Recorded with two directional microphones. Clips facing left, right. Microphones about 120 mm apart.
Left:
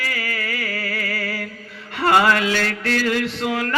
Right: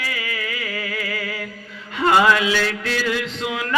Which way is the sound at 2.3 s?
50° left (ahead or behind).